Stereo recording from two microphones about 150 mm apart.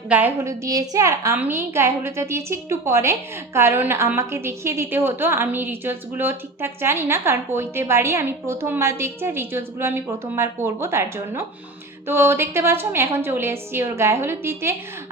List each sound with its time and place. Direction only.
0.1 s a woman's voice: 10° right (ahead or behind)